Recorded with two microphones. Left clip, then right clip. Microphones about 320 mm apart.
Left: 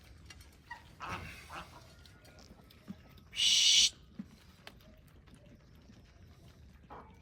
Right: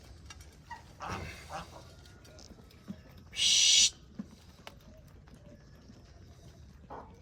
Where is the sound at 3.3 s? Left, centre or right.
Right.